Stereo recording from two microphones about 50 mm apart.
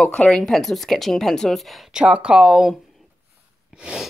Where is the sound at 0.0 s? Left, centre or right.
Left.